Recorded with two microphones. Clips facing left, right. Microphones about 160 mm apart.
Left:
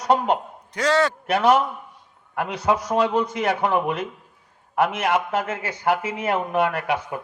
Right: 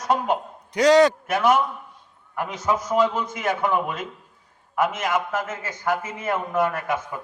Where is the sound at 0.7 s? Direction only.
15° right (ahead or behind).